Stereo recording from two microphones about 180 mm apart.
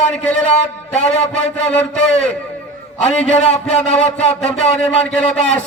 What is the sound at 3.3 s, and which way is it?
A man's voice, 40° left (ahead or behind).